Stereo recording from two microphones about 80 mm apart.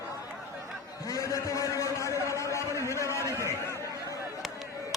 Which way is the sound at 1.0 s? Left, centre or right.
Left.